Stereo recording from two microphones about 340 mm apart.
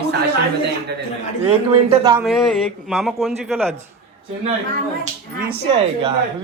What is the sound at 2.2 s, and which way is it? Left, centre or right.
A man's voice, centre.